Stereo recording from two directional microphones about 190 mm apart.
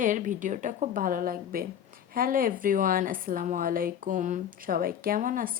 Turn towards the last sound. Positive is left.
turn(degrees=-45)  # may be behind; listen again after turning